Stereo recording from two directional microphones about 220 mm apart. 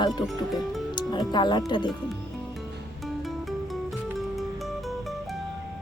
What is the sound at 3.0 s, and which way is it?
Music, centre (ahead or behind).